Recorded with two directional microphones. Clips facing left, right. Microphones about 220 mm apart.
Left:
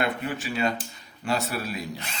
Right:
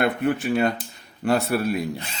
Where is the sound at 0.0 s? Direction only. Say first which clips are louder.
Right 6 dB; 60° right (ahead or behind).